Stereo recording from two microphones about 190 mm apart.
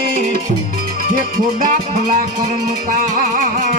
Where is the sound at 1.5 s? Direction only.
45° right (ahead or behind).